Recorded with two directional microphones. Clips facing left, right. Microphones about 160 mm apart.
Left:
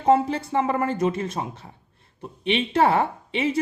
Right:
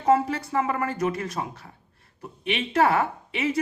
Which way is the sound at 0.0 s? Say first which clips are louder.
Left 2 dB; 25° left (ahead or behind).